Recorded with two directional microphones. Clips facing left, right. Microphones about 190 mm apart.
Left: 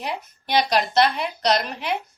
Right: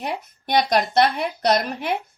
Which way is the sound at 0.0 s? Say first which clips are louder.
Right 2 dB; 50° right (ahead or behind).